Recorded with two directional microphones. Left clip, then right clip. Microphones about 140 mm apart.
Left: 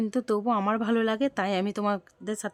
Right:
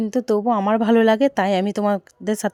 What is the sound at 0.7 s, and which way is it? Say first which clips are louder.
Speech: right 10 dB; 35° right (ahead or behind).